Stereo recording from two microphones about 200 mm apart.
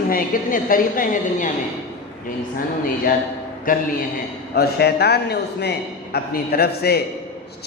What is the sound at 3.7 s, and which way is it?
Speech, 45° left (ahead or behind).